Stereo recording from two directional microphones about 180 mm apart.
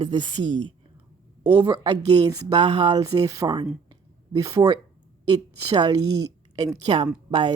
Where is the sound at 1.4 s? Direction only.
25° right (ahead or behind).